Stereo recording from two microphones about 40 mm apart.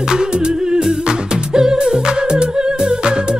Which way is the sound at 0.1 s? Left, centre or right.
Centre.